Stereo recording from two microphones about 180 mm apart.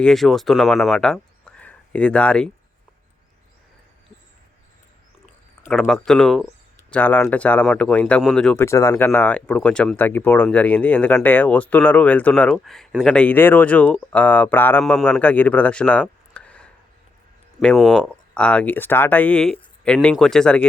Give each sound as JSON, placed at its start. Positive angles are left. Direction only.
{"t": 0.0, "sound": "speech", "side_deg": 0}
{"t": 5.6, "sound": "speech", "side_deg": 0}
{"t": 8.6, "sound": "speech", "side_deg": 15}